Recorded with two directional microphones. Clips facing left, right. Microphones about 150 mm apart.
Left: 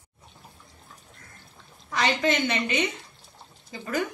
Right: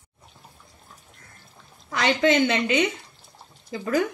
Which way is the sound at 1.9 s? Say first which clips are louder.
Right 4 dB; 90° right.